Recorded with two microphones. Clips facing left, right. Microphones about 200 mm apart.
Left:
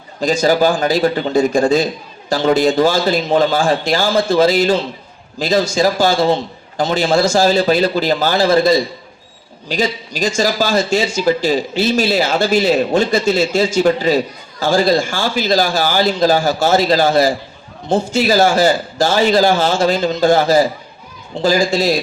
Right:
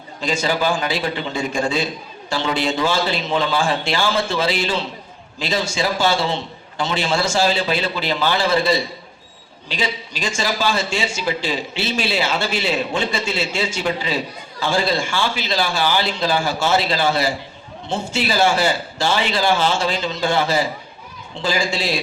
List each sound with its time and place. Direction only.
0.2 s a man's voice: 40° left (ahead or behind)